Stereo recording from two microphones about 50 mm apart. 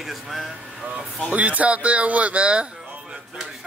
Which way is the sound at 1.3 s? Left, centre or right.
Right.